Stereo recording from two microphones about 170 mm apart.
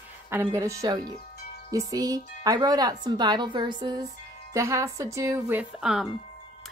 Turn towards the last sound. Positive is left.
turn(degrees=-5)  # may be behind; listen again after turning